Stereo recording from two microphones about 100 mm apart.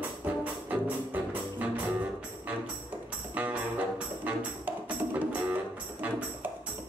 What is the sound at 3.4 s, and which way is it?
Music, 15° right (ahead or behind).